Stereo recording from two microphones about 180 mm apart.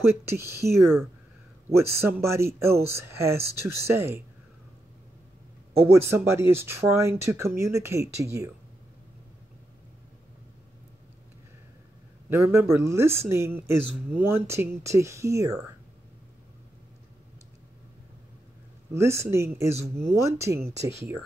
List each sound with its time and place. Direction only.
0.6 s speech: 65° right (ahead or behind)
1.7 s speech: 15° right (ahead or behind)
5.8 s speech: 15° right (ahead or behind)
12.3 s speech: 15° right (ahead or behind)
18.9 s speech: 15° right (ahead or behind)